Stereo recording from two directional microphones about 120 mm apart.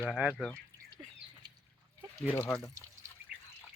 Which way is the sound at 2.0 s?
15° right (ahead or behind).